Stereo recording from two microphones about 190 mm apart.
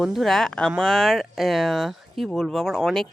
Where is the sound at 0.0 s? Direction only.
Centre (ahead or behind).